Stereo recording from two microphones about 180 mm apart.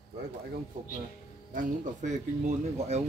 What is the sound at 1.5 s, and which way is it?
Speech, 45° right (ahead or behind).